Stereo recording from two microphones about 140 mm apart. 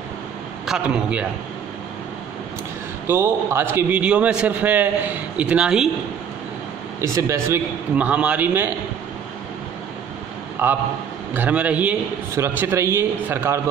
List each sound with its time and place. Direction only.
0.7 s a man's voice: 5° right (ahead or behind)
3.1 s a man's voice: 15° right (ahead or behind)
7.0 s a man's voice: 20° right (ahead or behind)
10.6 s a man's voice: 15° right (ahead or behind)